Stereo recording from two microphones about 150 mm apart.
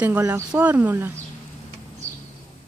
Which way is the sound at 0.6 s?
10° right (ahead or behind).